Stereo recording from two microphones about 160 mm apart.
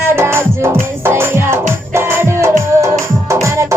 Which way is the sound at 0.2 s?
15° right (ahead or behind).